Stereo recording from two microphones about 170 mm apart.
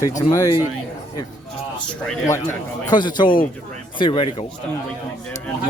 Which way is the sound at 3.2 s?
55° left (ahead or behind).